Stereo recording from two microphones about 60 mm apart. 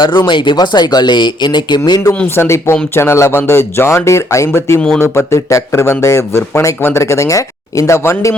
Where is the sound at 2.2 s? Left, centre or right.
Left.